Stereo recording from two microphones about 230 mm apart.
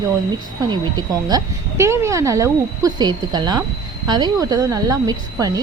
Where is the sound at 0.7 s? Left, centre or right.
Centre.